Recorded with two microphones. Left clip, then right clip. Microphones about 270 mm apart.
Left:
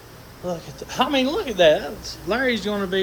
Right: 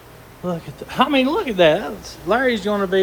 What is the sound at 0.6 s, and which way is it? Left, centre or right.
Speech, right.